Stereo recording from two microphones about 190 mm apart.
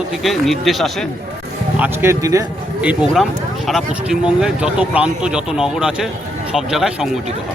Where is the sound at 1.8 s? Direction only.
15° right (ahead or behind).